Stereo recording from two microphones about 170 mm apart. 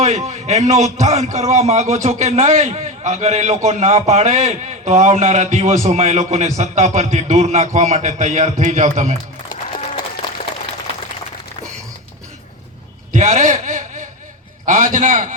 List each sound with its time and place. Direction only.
0.3 s a man's voice: 40° right (ahead or behind)
13.1 s a sound: 45° right (ahead or behind)
14.6 s a man's voice: 50° right (ahead or behind)